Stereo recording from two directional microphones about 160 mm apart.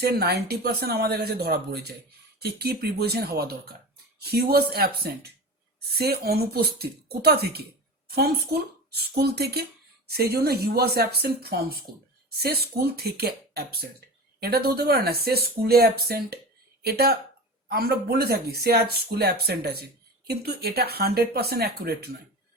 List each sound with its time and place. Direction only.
0.0 s speech: 80° right